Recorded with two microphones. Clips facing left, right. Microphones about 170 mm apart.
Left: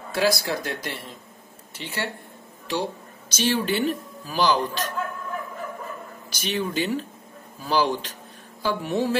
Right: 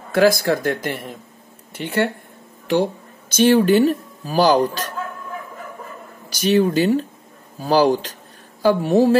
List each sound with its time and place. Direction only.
0.1 s speech: 50° right (ahead or behind)
6.4 s speech: 40° right (ahead or behind)